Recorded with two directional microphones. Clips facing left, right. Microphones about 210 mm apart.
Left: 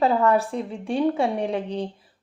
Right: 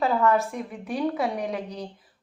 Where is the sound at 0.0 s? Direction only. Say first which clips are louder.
Left 2 dB; 35° left (ahead or behind).